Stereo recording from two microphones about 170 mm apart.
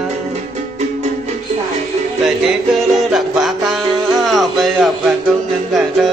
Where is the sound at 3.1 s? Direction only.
Centre (ahead or behind).